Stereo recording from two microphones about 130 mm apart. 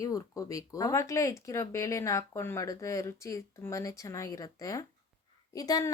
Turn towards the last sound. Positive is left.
turn(degrees=30)  # may be behind; listen again after turning